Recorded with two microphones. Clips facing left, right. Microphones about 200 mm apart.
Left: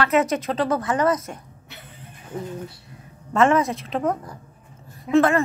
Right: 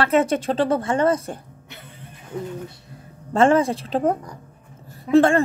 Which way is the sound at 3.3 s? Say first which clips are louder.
Right 2 dB; 30° right (ahead or behind).